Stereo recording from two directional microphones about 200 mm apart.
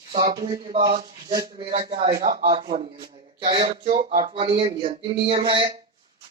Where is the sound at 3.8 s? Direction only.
40° right (ahead or behind).